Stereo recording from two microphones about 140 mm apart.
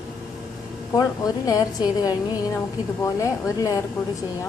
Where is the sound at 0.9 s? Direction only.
25° left (ahead or behind).